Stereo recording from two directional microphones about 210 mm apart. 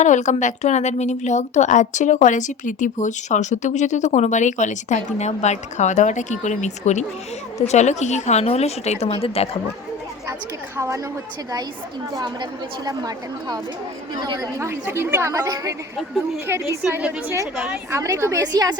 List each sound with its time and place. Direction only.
0.0 s speech: 35° left (ahead or behind)
10.8 s a woman's voice: 15° right (ahead or behind)
12.1 s a woman's voice: 20° right (ahead or behind)
16.0 s a woman's voice: centre (ahead or behind); by 18.8 s 20° right (ahead or behind)